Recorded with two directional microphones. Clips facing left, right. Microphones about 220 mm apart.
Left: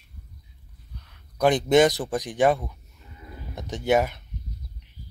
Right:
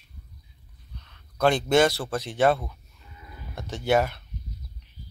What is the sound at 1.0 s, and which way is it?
Speech, 10° left (ahead or behind).